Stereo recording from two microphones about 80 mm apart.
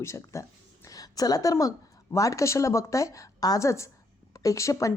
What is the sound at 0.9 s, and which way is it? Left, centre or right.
A woman's voice, left.